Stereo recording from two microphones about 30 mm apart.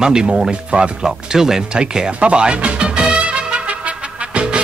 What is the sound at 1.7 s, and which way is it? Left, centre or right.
Speech, right.